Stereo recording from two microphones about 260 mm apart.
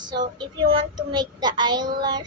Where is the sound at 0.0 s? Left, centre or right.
Centre.